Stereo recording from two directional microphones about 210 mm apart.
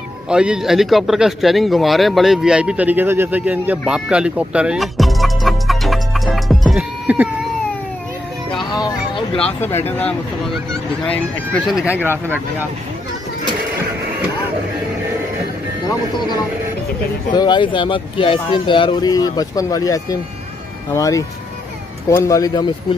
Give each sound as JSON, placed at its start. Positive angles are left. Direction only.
{"t": 0.3, "sound": "speech", "side_deg": -5}
{"t": 8.7, "sound": "a sound", "side_deg": 20}
{"t": 9.4, "sound": "speech", "side_deg": 10}
{"t": 17.3, "sound": "speech", "side_deg": 20}